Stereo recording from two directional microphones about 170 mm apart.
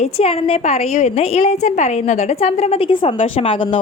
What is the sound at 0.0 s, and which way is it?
A woman's voice, 35° left (ahead or behind).